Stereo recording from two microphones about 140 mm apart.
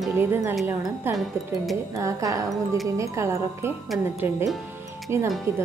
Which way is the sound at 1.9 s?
25° right (ahead or behind).